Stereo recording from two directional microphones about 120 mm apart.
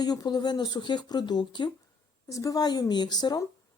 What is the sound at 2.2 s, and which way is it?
A woman's voice, 30° left (ahead or behind).